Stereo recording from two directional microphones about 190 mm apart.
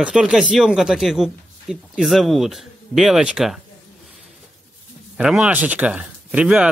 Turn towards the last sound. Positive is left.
turn(degrees=-5)  # may be behind; listen again after turning